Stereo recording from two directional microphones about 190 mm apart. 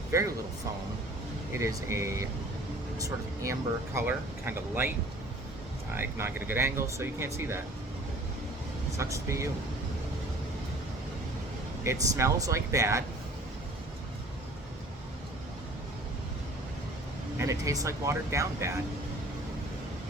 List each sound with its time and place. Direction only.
0.1 s speech: 15° right (ahead or behind)
1.5 s speech: 15° right (ahead or behind)
5.9 s speech: 10° right (ahead or behind)
9.0 s speech: 15° right (ahead or behind)
11.8 s speech: 15° right (ahead or behind)
17.3 s speech: 15° right (ahead or behind)